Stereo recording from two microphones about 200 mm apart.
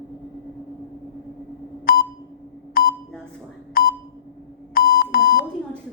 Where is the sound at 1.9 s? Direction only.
50° left (ahead or behind).